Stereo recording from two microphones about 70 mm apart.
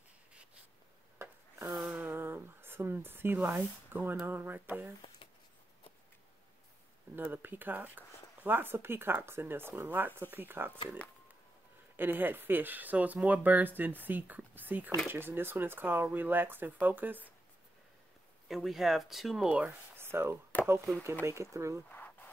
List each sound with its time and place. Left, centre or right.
1.1 s wood: right
2.0 s a sound: right
4.3 s speech: right
7.2 s speech: right
12.0 s speech: right
18.5 s speech: centre
19.5 s speech: right
20.0 s chop: right
20.6 s speech: right
21.8 s a sound: left